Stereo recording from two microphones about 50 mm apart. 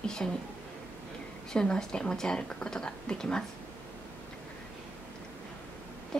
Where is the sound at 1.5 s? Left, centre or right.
Centre.